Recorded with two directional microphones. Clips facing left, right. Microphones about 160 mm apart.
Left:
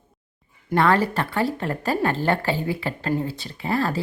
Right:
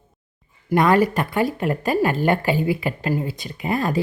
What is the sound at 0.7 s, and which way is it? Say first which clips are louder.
Speech: right 3 dB; 15° right (ahead or behind).